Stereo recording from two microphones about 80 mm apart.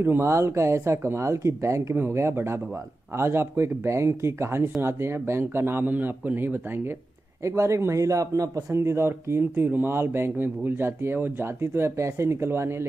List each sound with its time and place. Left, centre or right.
0.0 s speech: right
7.4 s speech: right